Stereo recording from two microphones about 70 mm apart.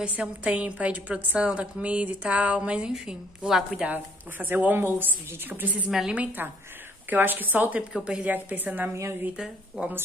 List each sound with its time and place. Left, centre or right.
0.0 s a woman's voice: centre
3.8 s speech: right
5.9 s a woman's voice: centre
6.1 s speech: right
7.9 s a woman's voice: centre
8.3 s speech: right
9.8 s a woman's voice: centre